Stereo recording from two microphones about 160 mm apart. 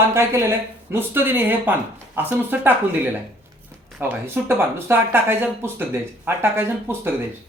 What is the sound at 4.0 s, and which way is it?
Speech, 15° right (ahead or behind).